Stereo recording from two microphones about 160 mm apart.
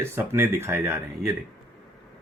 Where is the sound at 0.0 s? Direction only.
15° right (ahead or behind).